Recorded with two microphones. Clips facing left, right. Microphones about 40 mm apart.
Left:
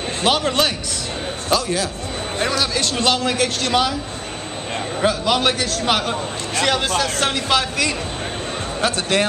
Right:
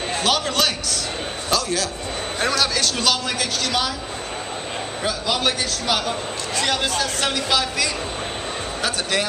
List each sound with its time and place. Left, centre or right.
0.2 s a man's voice: left
2.7 s speech: left
5.0 s speech: left